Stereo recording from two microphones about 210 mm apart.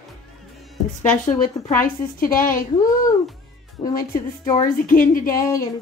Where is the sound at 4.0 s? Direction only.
15° left (ahead or behind).